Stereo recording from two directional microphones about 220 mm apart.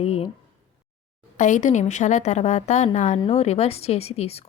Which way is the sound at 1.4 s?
35° left (ahead or behind).